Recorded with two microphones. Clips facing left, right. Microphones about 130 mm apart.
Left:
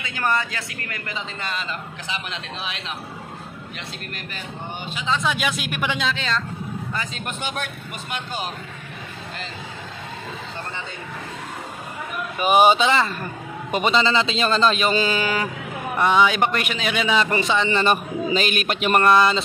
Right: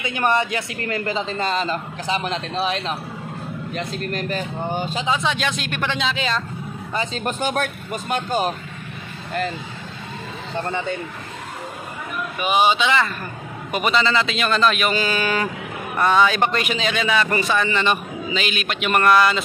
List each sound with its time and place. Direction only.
0.0 s a man's voice: 20° right (ahead or behind); by 5.0 s 40° right (ahead or behind)
5.2 s speech: 5° left (ahead or behind)
6.1 s speech: 10° right (ahead or behind)
7.2 s speech: 40° right (ahead or behind)
12.4 s speech: 45° left (ahead or behind)
12.8 s a man's voice: 30° left (ahead or behind)
17.7 s a man's voice: 40° left (ahead or behind)